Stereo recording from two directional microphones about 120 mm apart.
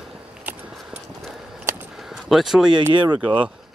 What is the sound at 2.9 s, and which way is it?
Speech, 40° right (ahead or behind).